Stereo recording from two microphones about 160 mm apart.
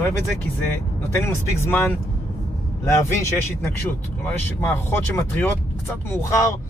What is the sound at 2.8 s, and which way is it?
Speech, 15° left (ahead or behind).